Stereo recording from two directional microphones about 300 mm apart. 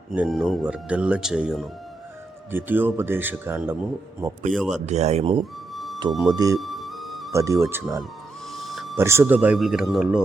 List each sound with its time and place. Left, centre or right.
0.1 s a man's voice: centre
4.7 s speech: right
5.7 s music: centre
6.1 s a man's voice: centre
6.3 s speech: centre
6.6 s music: centre
7.3 s speech: centre